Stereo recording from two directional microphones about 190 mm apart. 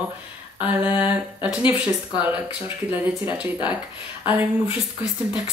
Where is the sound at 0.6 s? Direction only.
10° right (ahead or behind).